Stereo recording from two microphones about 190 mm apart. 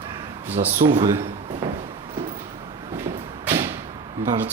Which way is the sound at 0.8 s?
40° right (ahead or behind).